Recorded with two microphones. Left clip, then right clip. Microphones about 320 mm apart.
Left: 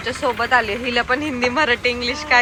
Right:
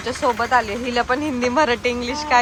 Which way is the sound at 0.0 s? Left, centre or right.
Centre.